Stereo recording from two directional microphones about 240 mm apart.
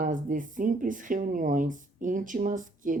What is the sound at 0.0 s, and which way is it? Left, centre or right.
Speech, right.